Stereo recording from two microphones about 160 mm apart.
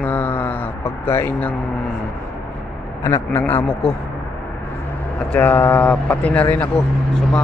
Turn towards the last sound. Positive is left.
turn(degrees=5)  # may be behind; listen again after turning